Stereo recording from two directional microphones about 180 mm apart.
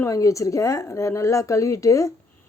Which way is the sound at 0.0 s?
20° left (ahead or behind).